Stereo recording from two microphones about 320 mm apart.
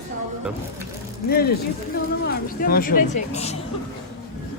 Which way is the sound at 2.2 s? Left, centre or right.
Left.